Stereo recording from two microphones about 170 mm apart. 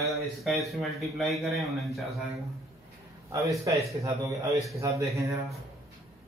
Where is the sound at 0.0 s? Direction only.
Centre (ahead or behind).